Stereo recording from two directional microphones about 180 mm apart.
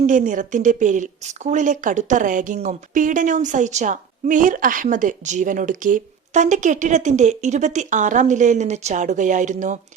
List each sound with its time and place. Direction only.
0.0 s a woman's voice: 45° right (ahead or behind)